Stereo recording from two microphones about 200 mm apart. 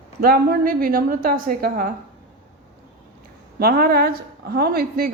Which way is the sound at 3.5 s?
50° right (ahead or behind).